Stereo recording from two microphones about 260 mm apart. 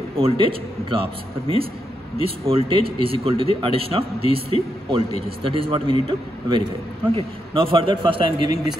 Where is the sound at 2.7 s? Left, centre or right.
Left.